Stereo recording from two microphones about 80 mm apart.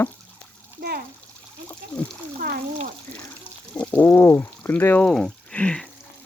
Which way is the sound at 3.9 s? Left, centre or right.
Left.